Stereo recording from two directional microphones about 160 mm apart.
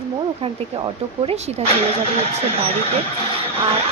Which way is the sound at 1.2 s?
45° right (ahead or behind).